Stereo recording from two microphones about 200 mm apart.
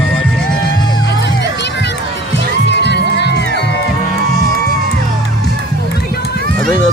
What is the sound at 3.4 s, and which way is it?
Music, 50° right (ahead or behind).